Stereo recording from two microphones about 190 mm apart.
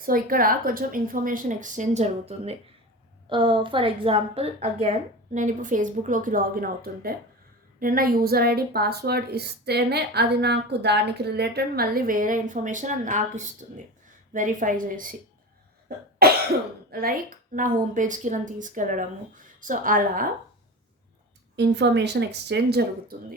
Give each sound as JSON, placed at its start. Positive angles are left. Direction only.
{"t": 0.0, "sound": "a woman's voice", "side_deg": -50}
{"t": 16.2, "sound": "cough", "side_deg": -55}
{"t": 16.9, "sound": "a woman's voice", "side_deg": -50}
{"t": 21.5, "sound": "a woman's voice", "side_deg": -65}